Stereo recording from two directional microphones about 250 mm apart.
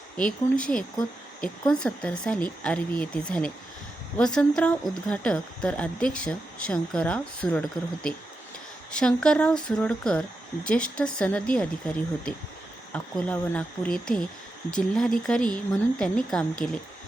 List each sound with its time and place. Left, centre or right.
0.2 s speech: centre
8.9 s speech: centre
12.9 s speech: centre